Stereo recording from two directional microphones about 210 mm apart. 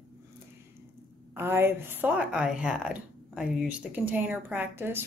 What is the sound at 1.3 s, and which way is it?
A woman's voice, 10° right (ahead or behind).